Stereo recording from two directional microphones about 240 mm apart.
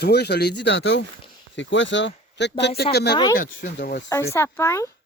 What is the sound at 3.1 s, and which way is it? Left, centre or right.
Speech, centre.